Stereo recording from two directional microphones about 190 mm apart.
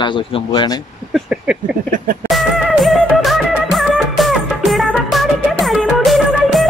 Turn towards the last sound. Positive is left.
turn(degrees=0)  # may be behind; listen again after turning